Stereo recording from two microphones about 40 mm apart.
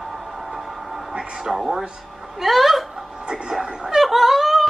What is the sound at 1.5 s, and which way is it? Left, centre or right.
A man's voice, centre.